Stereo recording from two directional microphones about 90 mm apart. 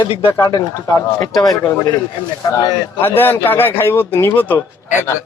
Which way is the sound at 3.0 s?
25° left (ahead or behind).